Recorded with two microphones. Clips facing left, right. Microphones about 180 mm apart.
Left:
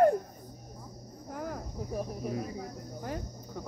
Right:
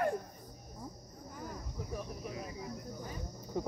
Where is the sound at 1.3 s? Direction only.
75° left (ahead or behind).